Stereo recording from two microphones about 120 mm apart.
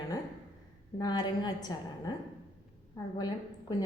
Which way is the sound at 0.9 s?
35° left (ahead or behind).